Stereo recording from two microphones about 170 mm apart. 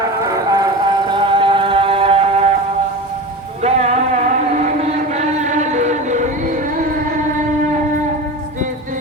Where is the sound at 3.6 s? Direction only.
40° right (ahead or behind).